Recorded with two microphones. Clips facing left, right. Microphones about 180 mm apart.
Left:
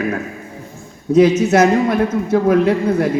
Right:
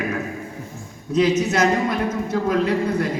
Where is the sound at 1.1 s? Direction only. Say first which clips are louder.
Left 7 dB; 55° left (ahead or behind).